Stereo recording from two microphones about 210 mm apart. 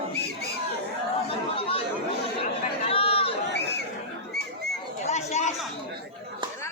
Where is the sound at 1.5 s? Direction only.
25° left (ahead or behind).